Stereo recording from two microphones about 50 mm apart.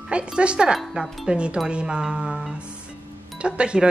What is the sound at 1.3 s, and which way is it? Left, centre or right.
Speech, right.